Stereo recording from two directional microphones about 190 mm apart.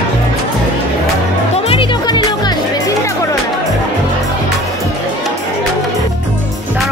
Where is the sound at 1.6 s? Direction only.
30° left (ahead or behind).